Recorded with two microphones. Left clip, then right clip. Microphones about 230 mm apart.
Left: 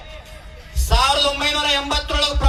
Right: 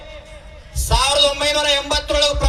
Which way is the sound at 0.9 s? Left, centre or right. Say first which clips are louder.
Right 1 dB; right.